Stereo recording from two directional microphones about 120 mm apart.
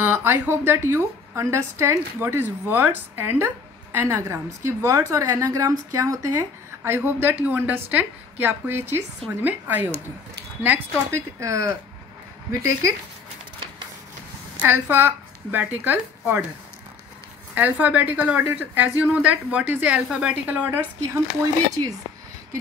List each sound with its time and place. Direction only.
0.0 s a woman's voice: 20° right (ahead or behind)
14.6 s speech: 20° right (ahead or behind)
17.6 s speech: 15° right (ahead or behind)
21.0 s a woman's voice: 25° right (ahead or behind)